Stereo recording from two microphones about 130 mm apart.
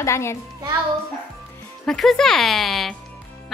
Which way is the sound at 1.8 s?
5° left (ahead or behind).